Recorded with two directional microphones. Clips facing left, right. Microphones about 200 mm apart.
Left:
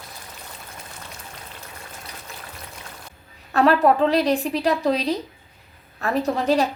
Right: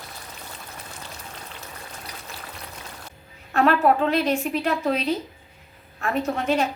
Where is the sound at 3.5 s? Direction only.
35° left (ahead or behind).